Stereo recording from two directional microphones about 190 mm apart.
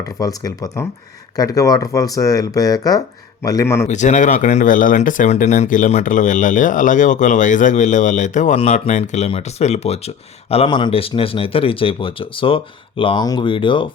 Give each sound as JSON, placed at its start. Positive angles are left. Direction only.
{"t": 0.0, "sound": "a man's voice", "side_deg": 20}
{"t": 3.8, "sound": "speech", "side_deg": 40}